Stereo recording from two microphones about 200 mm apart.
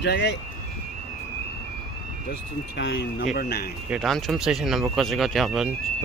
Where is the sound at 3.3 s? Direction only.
50° left (ahead or behind).